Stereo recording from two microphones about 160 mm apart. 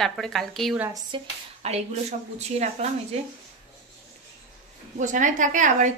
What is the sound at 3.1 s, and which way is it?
Speech, 40° right (ahead or behind).